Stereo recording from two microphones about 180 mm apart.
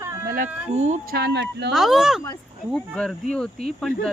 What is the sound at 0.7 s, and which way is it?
Speech, 40° right (ahead or behind).